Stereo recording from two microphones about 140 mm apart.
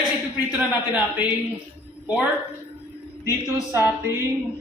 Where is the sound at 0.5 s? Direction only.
10° right (ahead or behind).